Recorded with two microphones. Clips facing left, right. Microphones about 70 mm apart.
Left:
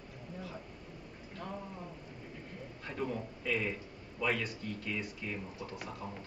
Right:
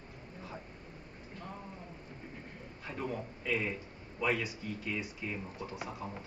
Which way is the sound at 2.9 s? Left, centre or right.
Centre.